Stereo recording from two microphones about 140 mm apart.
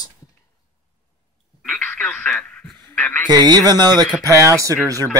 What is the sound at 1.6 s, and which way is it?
Radio, 5° left (ahead or behind).